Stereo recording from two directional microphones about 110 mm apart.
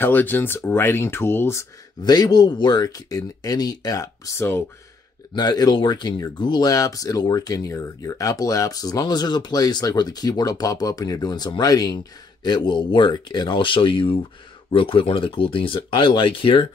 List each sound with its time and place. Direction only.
0.0 s speech: 15° left (ahead or behind)
2.0 s speech: 40° left (ahead or behind)